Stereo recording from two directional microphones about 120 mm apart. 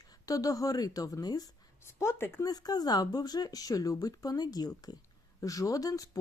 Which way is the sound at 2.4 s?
30° left (ahead or behind).